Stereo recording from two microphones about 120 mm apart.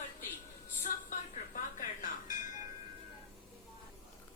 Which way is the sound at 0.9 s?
90° left.